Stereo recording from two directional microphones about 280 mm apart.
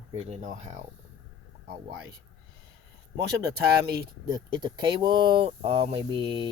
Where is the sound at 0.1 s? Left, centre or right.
Right.